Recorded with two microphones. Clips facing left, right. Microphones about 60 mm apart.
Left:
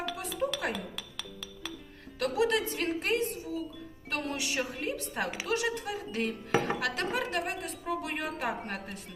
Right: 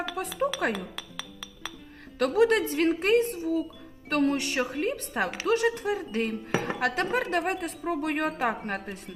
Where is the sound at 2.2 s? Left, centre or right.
Right.